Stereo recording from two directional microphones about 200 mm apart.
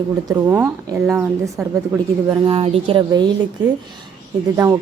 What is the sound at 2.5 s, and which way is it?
Speech, 25° right (ahead or behind).